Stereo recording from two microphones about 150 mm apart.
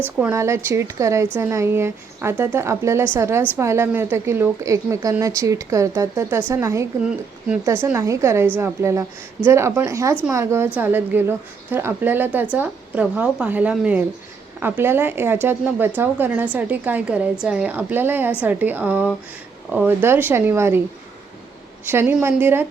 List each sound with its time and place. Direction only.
0.2 s a woman's voice: 15° right (ahead or behind)
7.0 s a woman's voice: 5° right (ahead or behind)
21.8 s a woman's voice: 15° right (ahead or behind)